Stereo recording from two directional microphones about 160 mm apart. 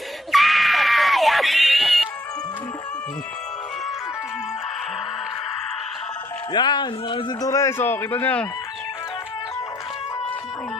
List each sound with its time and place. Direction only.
0.3 s screaming: centre (ahead or behind)
6.5 s a man's voice: 30° left (ahead or behind); by 8.5 s 10° left (ahead or behind)